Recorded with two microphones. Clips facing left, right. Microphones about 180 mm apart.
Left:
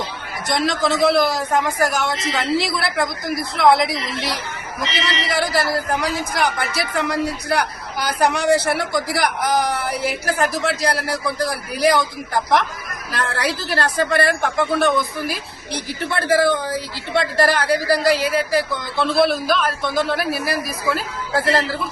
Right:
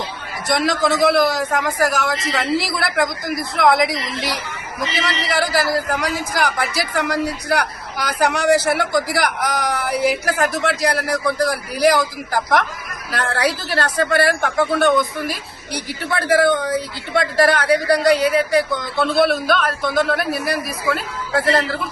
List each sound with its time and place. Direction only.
0.4 s speech: centre (ahead or behind)
1.3 s a man's voice: 30° left (ahead or behind)
1.8 s speech: centre (ahead or behind)